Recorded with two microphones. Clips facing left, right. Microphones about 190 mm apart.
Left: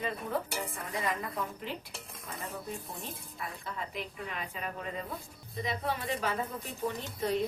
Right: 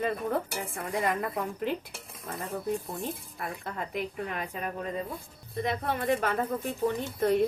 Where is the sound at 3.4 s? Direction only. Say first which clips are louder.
Right 2 dB; 55° right (ahead or behind).